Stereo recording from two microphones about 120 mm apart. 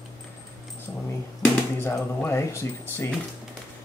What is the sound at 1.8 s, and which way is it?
Speech, 20° left (ahead or behind).